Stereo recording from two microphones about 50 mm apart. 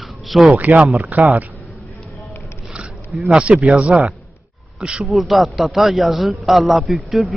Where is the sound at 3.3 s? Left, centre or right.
Right.